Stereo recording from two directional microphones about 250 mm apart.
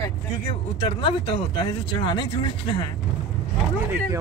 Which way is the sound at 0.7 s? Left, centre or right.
Left.